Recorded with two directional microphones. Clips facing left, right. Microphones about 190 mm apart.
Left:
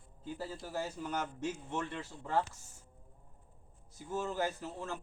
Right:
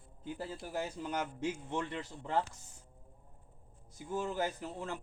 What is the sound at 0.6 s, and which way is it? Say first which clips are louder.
Speech: right 1 dB; 15° right (ahead or behind).